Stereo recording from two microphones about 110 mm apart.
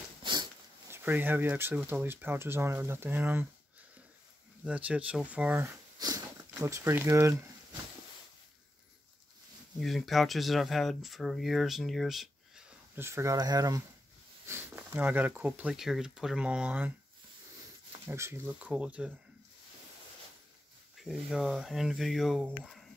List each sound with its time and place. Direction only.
0.2 s a sound: 45° right (ahead or behind)
0.8 s speech: 20° right (ahead or behind)
4.6 s speech: 10° right (ahead or behind)
5.9 s dog: 35° right (ahead or behind)
6.5 s speech: 25° right (ahead or behind)
9.8 s speech: centre (ahead or behind)
12.9 s speech: 25° right (ahead or behind)
14.5 s a sound: 25° right (ahead or behind)
15.0 s speech: 15° right (ahead or behind)
18.0 s speech: 25° right (ahead or behind)
18.5 s speech: 10° right (ahead or behind)
20.9 s speech: centre (ahead or behind)